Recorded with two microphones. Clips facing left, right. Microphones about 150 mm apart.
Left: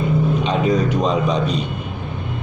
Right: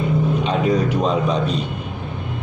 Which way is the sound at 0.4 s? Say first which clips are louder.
Left 1 dB; 5° right (ahead or behind).